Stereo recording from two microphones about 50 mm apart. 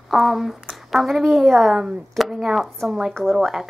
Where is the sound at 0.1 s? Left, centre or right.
Centre.